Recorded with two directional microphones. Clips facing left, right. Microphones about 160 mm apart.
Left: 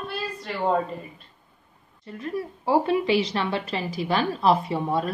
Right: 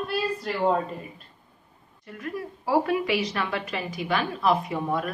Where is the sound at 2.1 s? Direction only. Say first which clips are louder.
Left 3 dB; 30° left (ahead or behind).